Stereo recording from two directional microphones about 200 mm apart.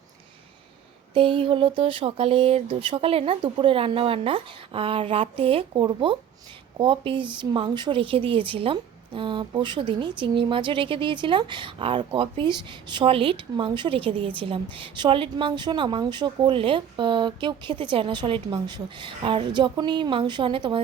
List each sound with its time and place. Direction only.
1.1 s speech: 25° right (ahead or behind)